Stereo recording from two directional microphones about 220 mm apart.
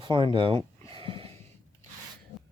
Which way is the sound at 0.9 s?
25° right (ahead or behind).